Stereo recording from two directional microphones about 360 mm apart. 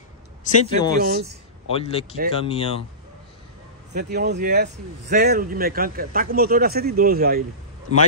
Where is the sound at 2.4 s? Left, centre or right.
Centre.